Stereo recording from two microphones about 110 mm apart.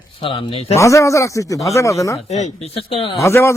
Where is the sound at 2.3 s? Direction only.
90° left; by 3.1 s 55° left (ahead or behind).